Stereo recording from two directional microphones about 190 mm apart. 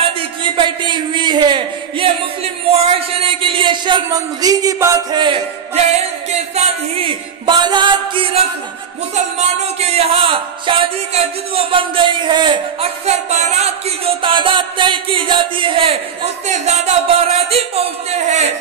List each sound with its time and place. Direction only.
0.0 s a sound: 25° right (ahead or behind)
2.7 s speech: 30° right (ahead or behind)
13.0 s speech: 35° right (ahead or behind)